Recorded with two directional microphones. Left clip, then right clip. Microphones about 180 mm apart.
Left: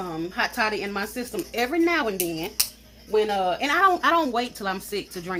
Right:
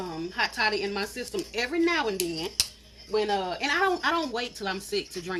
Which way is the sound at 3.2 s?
45° left (ahead or behind).